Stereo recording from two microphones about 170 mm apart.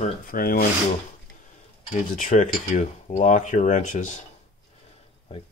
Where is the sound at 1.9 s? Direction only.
50° left (ahead or behind).